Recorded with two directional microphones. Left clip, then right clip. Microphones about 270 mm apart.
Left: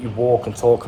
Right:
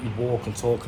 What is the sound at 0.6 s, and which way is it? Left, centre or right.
Speech, left.